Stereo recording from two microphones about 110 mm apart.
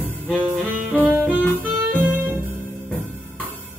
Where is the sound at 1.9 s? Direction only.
15° left (ahead or behind).